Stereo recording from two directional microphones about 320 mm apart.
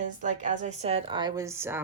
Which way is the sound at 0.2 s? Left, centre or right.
Right.